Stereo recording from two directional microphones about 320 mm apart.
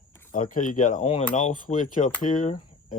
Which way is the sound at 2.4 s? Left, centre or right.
Left.